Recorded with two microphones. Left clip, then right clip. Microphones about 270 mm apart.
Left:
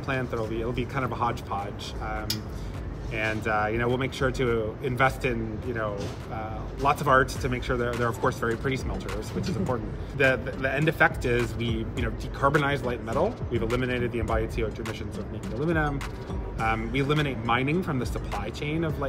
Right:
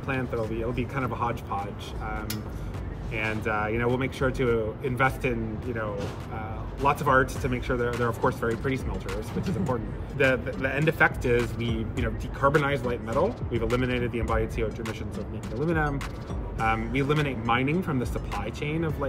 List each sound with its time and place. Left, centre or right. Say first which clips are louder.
0.0 s speech: even; centre